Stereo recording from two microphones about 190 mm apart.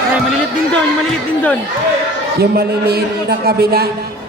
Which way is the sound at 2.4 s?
60° right (ahead or behind).